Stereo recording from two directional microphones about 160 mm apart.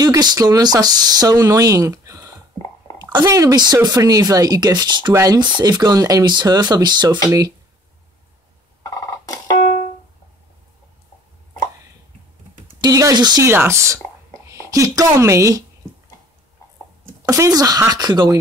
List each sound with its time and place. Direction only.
0.0 s speech: 25° right (ahead or behind)
8.8 s a sound: 20° left (ahead or behind)
12.8 s speech: 25° right (ahead or behind)
17.3 s speech: 20° right (ahead or behind)